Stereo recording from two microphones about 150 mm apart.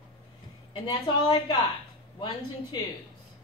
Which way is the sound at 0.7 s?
35° left (ahead or behind).